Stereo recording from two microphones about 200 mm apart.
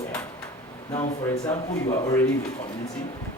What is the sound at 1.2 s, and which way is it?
A man's voice, 15° left (ahead or behind).